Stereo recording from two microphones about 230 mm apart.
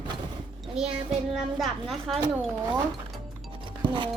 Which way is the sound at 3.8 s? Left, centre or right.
Centre.